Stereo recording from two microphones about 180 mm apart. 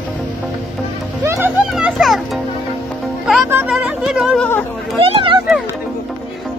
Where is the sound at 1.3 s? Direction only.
10° right (ahead or behind).